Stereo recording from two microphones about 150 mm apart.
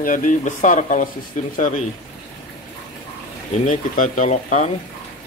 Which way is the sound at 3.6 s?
60° left (ahead or behind).